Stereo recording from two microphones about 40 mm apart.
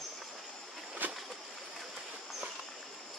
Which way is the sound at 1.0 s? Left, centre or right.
Right.